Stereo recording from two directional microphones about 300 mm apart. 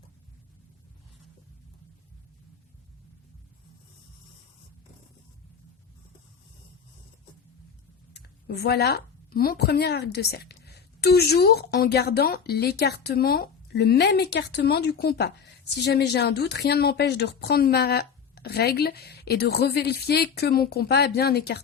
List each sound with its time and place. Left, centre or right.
8.1 s a woman's voice: left